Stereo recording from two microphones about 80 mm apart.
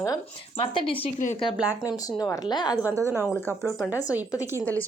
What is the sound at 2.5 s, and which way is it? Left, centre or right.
Speech, left.